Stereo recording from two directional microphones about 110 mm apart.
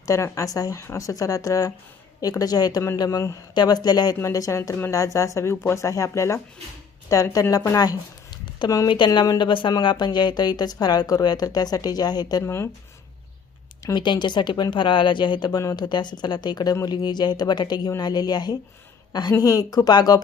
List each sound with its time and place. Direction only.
0.0 s a woman's voice: 30° left (ahead or behind)
12.5 s speech: 25° left (ahead or behind)
13.8 s a woman's voice: 45° left (ahead or behind)